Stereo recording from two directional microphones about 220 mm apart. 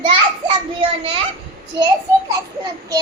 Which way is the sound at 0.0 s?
25° right (ahead or behind).